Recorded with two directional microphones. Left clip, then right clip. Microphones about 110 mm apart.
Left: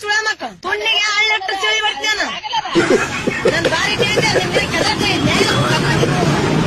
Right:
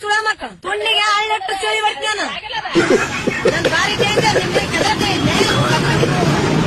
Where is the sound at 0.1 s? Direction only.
30° right (ahead or behind).